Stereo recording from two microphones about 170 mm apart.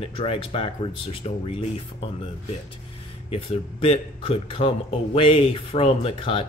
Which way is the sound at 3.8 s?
35° left (ahead or behind).